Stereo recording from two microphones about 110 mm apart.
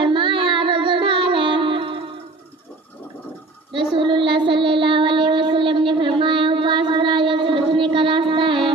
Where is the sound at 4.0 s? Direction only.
50° right (ahead or behind).